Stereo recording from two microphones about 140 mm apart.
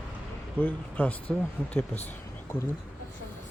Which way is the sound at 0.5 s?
10° left (ahead or behind).